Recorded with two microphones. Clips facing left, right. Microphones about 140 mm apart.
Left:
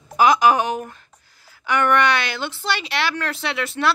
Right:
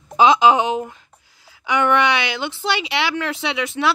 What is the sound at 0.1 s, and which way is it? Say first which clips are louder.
Speech: right 2 dB; 20° right (ahead or behind).